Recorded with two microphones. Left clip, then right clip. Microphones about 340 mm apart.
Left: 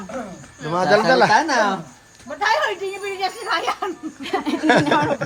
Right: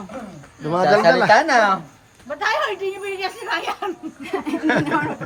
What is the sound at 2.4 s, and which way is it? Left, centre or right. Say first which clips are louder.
Speech: left 2 dB; centre.